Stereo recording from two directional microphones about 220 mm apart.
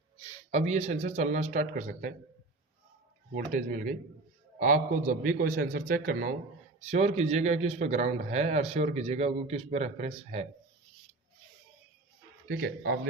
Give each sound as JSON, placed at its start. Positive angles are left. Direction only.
{"t": 0.5, "sound": "a man's voice", "side_deg": -30}
{"t": 3.3, "sound": "a man's voice", "side_deg": -35}
{"t": 12.5, "sound": "speech", "side_deg": -45}